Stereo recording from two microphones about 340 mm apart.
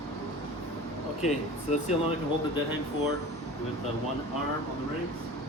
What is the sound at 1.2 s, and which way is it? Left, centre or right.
Speech, centre.